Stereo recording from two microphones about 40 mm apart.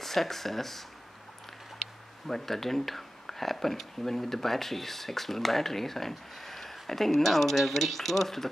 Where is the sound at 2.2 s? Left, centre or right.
Centre.